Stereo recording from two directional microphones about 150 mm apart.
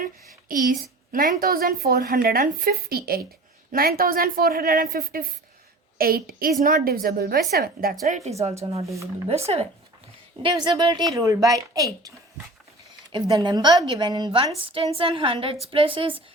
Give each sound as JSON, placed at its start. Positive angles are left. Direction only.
{"t": 0.4, "sound": "a woman's voice", "side_deg": -70}
{"t": 6.0, "sound": "a woman's voice", "side_deg": -80}
{"t": 8.0, "sound": "speech", "side_deg": -50}
{"t": 10.4, "sound": "a woman's voice", "side_deg": -30}